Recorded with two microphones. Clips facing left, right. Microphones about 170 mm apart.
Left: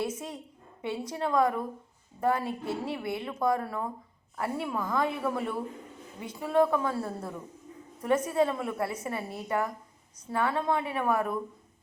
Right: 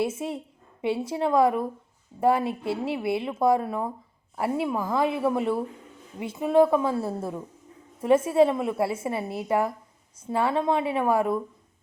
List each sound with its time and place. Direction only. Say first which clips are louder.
0.0 s a woman's voice: right 6 dB; 25° right (ahead or behind)